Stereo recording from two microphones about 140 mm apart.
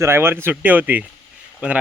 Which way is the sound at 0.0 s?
15° right (ahead or behind).